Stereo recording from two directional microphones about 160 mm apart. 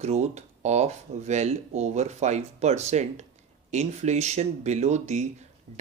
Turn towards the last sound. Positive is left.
turn(degrees=-45)  # may be behind; listen again after turning